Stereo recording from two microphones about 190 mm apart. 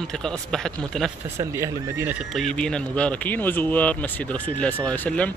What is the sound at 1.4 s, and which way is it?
Speech, 15° right (ahead or behind).